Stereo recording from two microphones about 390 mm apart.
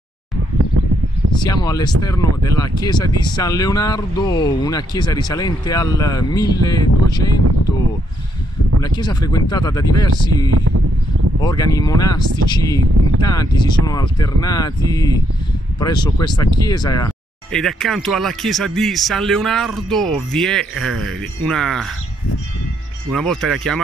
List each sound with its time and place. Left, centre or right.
1.4 s speech: centre
8.8 s speech: centre
10.5 s speech: right
11.4 s speech: centre
23.1 s speech: centre